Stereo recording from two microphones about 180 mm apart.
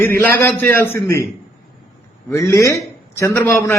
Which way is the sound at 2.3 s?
15° left (ahead or behind).